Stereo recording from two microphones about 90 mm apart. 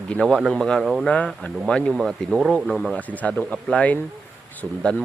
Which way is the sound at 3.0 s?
15° left (ahead or behind).